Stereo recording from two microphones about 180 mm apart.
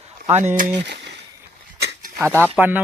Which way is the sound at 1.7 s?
65° right (ahead or behind).